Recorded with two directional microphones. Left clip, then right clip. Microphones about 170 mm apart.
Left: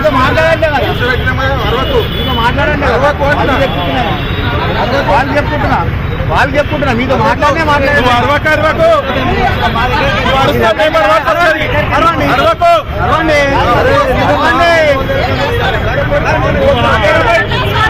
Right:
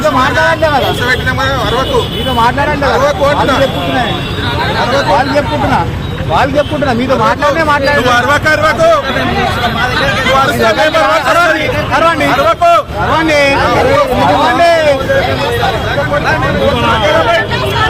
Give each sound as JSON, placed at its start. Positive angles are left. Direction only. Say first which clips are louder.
{"t": 8.1, "sound": "speech", "louder": "right 1 dB", "side_deg": -15}
{"t": 12.5, "sound": "speech", "louder": "even", "side_deg": -15}
{"t": 13.2, "sound": "speech", "louder": "right 1 dB", "side_deg": -45}